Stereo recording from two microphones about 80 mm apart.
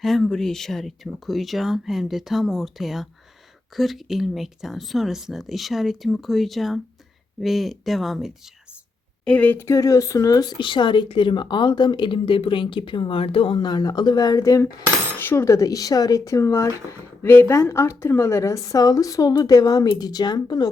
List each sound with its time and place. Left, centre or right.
0.0 s speech: centre
9.2 s speech: centre
9.6 s speech: left
10.6 s a woman's voice: left
13.5 s speech: left
15.2 s speech: left
15.4 s speech: left